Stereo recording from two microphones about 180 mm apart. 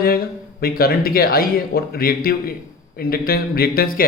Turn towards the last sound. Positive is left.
turn(degrees=55)  # may be behind; listen again after turning